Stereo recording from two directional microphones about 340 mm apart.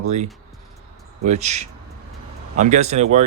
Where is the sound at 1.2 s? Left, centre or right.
Centre.